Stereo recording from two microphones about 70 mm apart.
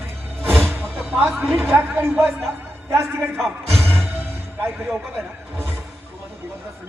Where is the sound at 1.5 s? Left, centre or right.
Right.